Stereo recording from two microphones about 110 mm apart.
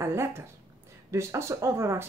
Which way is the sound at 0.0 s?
25° right (ahead or behind).